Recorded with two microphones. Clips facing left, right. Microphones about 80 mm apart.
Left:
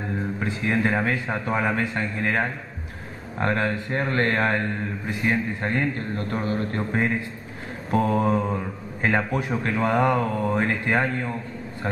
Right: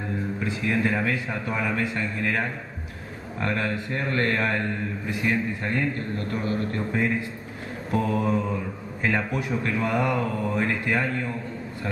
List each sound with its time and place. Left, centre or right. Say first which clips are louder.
0.4 s speech: left 1 dB; left